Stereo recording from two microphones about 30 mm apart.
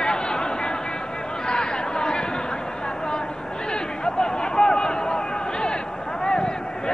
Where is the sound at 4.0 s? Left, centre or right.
Left.